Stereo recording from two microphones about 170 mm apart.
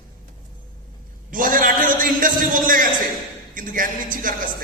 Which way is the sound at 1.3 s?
55° right (ahead or behind).